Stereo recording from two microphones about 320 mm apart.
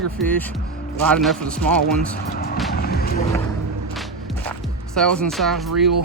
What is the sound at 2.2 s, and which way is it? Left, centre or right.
Speech, left.